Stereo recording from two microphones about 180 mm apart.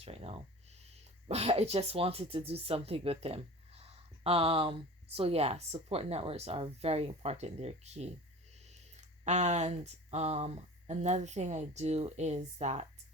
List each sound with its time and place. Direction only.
0.0 s speech: 35° right (ahead or behind)